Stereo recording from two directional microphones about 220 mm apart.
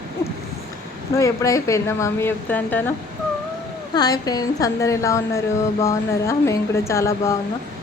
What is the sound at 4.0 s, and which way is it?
A woman's voice, 15° left (ahead or behind).